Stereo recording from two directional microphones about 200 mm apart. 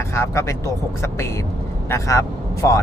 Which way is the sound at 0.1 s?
15° left (ahead or behind).